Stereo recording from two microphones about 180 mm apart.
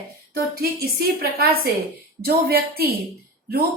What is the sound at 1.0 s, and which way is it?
A woman's voice, 60° right (ahead or behind).